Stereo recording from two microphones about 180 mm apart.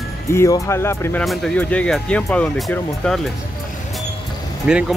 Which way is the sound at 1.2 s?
Centre (ahead or behind).